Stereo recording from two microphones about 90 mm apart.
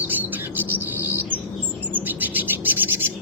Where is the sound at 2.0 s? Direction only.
20° right (ahead or behind).